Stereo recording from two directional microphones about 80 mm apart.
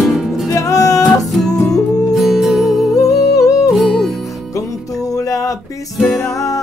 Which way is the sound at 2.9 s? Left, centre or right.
Left.